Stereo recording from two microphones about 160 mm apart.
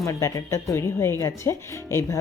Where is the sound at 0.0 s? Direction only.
20° left (ahead or behind).